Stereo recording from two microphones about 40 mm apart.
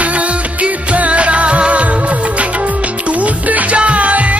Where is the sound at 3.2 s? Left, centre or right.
Right.